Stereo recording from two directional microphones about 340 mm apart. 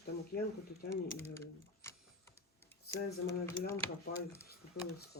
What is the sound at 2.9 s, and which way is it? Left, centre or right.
Speech, left.